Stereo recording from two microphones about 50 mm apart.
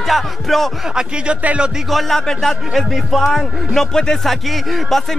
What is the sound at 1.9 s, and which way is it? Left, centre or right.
Speech, centre.